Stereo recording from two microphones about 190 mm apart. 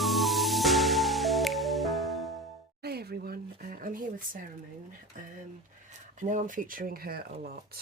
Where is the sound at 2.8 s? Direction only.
55° right (ahead or behind).